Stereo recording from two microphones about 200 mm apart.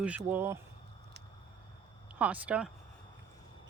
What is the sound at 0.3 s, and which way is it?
Speech, 10° right (ahead or behind).